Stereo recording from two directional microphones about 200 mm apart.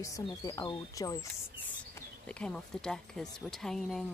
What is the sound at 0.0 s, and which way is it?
Speech, 15° left (ahead or behind).